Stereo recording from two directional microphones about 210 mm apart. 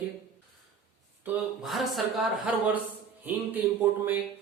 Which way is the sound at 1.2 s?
Centre (ahead or behind).